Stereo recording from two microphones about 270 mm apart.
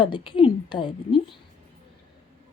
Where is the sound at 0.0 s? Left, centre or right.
Centre.